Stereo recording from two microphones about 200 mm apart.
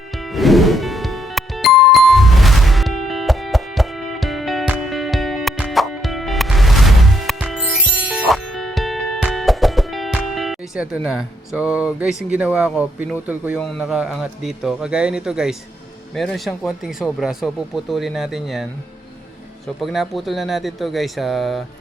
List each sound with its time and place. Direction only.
0.2 s music: centre (ahead or behind)
13.6 s speech: centre (ahead or behind)